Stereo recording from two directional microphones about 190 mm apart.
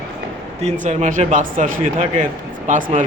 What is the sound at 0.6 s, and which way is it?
Speech, 35° right (ahead or behind).